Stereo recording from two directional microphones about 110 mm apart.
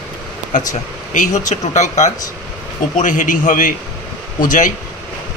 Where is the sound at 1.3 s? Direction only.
90° left.